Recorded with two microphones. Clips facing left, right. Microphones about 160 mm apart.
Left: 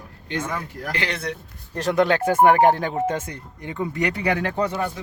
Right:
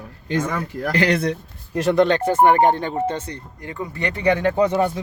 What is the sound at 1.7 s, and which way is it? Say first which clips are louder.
Speech: right 5 dB; 10° right (ahead or behind).